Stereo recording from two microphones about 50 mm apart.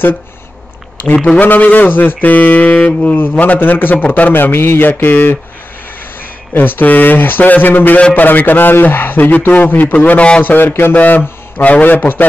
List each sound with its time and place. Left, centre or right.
1.1 s a man's voice: centre
1.4 s a man's voice: left
6.5 s a man's voice: left
10.4 s a man's voice: left